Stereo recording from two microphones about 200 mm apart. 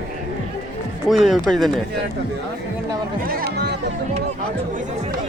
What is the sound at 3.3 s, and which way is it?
Music, 50° right (ahead or behind).